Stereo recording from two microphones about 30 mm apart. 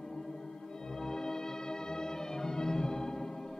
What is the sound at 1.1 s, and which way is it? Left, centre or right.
Music, centre.